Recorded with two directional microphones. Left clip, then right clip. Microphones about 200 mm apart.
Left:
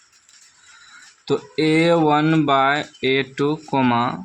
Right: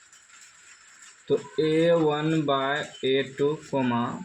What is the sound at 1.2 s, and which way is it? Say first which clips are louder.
Speech: left 5 dB; 50° left (ahead or behind).